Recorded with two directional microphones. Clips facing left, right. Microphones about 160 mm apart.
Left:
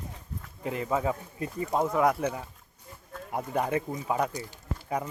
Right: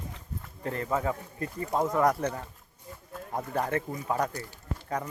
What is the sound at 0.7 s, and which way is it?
Speech, 10° left (ahead or behind).